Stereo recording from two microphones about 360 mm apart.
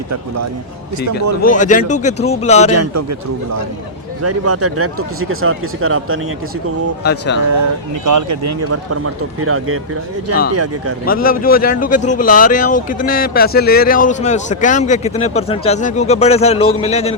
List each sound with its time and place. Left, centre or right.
1.4 s speech: left
2.7 s speech: right
7.0 s speech: left
8.0 s speech: right
11.0 s speech: left